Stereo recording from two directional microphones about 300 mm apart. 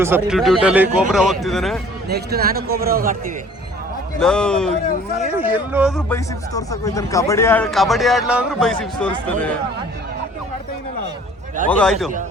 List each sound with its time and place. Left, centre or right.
0.3 s speech: centre
2.0 s a man's voice: right
4.2 s speech: centre
6.1 s speech: centre
11.7 s speech: centre